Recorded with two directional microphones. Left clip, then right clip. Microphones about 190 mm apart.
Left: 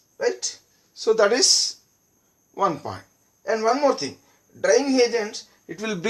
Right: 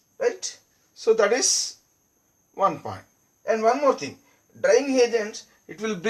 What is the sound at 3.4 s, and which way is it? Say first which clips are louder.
Speech: even; 15° left (ahead or behind).